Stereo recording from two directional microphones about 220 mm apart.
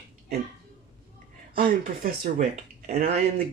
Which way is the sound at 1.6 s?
40° right (ahead or behind).